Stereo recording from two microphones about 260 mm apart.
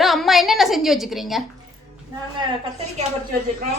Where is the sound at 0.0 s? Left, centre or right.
Centre.